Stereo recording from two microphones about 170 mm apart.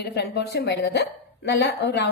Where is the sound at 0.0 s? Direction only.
75° left (ahead or behind).